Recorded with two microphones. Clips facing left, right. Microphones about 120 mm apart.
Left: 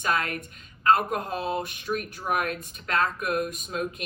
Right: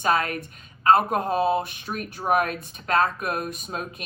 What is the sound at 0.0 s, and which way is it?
Speech, 30° right (ahead or behind).